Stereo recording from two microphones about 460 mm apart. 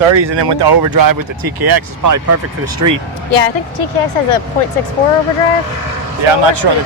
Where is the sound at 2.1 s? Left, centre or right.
Right.